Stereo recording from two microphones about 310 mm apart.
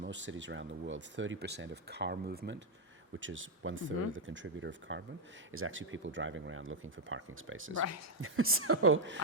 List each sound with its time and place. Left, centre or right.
0.0 s speech: right
7.8 s speech: left
8.2 s a woman's voice: right